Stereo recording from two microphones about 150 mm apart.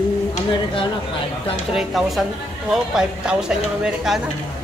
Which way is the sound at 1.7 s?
Centre (ahead or behind).